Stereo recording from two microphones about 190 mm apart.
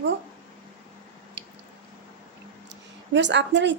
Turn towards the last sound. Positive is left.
turn(degrees=-70)  # may be behind; listen again after turning